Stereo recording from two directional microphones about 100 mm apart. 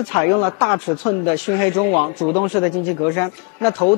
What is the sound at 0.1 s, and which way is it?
Speech, 20° left (ahead or behind).